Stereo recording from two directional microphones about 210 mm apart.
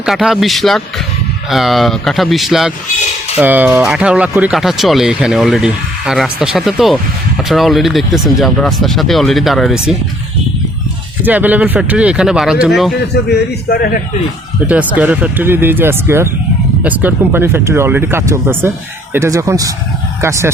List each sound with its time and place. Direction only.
0.0 s speech: 5° right (ahead or behind)
11.2 s speech: 10° right (ahead or behind)
13.3 s a man's voice: 50° left (ahead or behind)
14.7 s speech: 5° right (ahead or behind)